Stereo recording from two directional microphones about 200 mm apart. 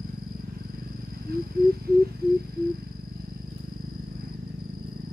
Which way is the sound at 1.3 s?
50° right (ahead or behind).